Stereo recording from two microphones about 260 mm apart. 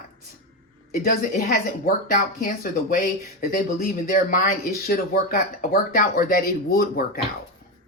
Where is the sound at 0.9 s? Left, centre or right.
Left.